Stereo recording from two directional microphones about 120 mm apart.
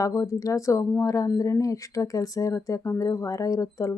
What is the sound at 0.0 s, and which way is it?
Speech, 25° left (ahead or behind).